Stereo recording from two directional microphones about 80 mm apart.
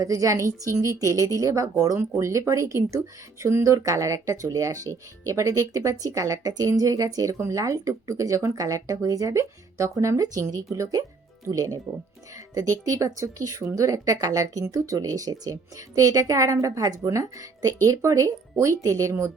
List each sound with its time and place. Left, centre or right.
0.0 s speech: right